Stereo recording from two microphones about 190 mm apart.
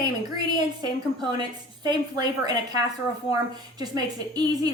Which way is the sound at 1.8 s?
20° right (ahead or behind).